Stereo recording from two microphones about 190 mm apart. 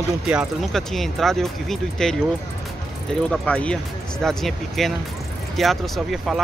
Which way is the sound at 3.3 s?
5° left (ahead or behind).